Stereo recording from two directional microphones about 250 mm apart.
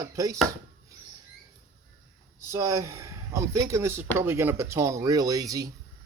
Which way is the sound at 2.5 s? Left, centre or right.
Centre.